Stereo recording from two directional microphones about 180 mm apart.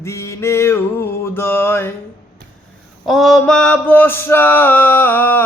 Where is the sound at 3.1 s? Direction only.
Centre (ahead or behind).